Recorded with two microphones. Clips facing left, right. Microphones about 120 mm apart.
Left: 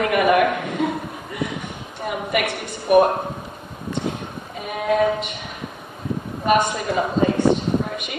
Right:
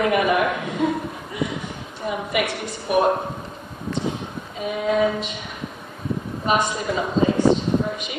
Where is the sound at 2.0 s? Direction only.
55° left (ahead or behind).